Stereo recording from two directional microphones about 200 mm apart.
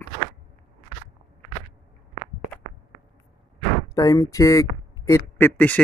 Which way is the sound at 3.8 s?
15° left (ahead or behind).